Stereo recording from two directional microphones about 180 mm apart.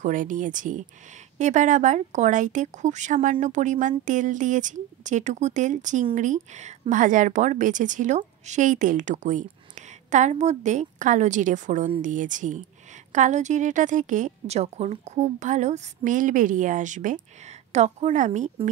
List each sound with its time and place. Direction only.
0.0 s a woman's voice: 45° right (ahead or behind)